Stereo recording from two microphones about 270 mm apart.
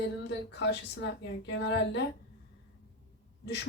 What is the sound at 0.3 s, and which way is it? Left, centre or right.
Speech, left.